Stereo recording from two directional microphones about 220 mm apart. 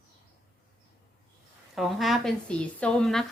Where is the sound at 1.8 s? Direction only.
Centre (ahead or behind).